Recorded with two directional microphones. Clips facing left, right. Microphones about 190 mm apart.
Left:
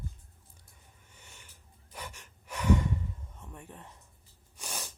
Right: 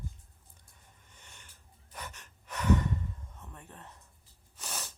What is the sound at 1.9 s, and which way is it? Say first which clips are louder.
Gasp: left 1 dB; 10° left (ahead or behind).